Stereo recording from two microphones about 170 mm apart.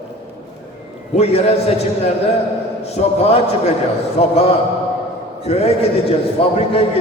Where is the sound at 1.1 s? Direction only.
40° left (ahead or behind).